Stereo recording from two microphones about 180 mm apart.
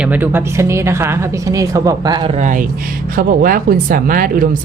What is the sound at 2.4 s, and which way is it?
Speech, 45° right (ahead or behind).